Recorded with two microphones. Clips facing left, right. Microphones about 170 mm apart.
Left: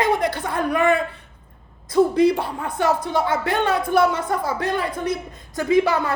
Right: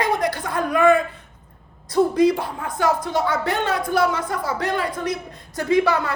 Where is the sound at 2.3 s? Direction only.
60° left (ahead or behind).